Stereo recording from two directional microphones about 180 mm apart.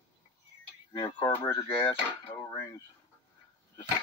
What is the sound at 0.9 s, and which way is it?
Speech, 25° left (ahead or behind).